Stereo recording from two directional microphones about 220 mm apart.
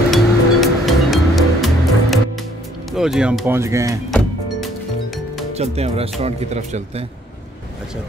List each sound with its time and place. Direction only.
0.1 s music: centre (ahead or behind)
2.9 s speech: centre (ahead or behind)
4.1 s music: centre (ahead or behind)
5.6 s speech: 30° right (ahead or behind)